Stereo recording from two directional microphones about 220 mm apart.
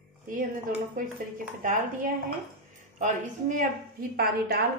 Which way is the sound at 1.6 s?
40° right (ahead or behind).